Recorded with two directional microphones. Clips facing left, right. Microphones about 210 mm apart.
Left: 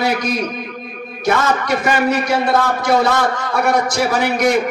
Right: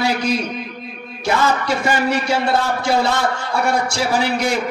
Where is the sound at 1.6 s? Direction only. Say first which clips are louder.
Left 2 dB; 30° right (ahead or behind).